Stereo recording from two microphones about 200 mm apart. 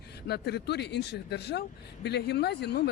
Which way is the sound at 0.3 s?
55° left (ahead or behind).